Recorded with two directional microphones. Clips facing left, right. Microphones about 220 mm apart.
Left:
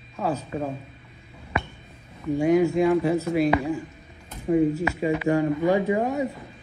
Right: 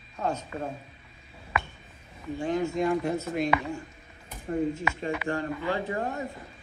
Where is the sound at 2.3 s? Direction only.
10° left (ahead or behind).